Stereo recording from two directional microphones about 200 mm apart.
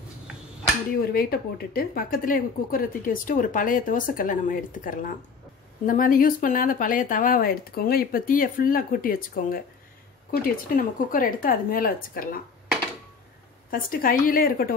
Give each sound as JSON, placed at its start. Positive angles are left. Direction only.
{"t": 1.1, "sound": "speech", "side_deg": 50}
{"t": 13.7, "sound": "speech", "side_deg": 45}